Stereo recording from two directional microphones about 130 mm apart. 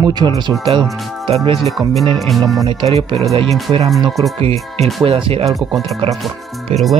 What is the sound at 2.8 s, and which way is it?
Speech, 45° right (ahead or behind).